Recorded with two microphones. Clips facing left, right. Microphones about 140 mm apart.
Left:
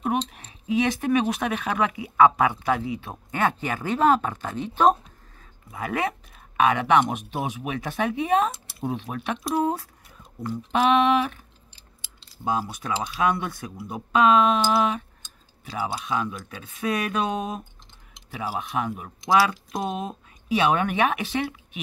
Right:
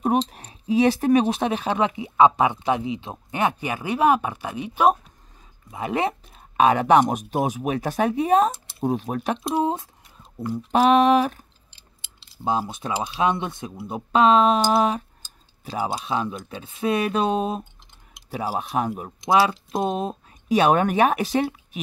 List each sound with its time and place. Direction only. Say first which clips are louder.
0.0 s speech: right 4 dB; 35° right (ahead or behind); by 4.9 s 10° right (ahead or behind)
5.4 s speech: right 2 dB; 20° right (ahead or behind); by 9.4 s 40° right (ahead or behind)
9.4 s speech: left 2 dB; 25° right (ahead or behind)
10.7 s speech: right 3 dB; 40° right (ahead or behind)
12.0 s keys jangling: right 2 dB; 25° right (ahead or behind)
13.0 s speech: right 2 dB; 25° right (ahead or behind)